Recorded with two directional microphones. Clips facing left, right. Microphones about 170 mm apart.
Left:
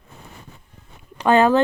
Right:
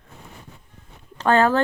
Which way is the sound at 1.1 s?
15° left (ahead or behind).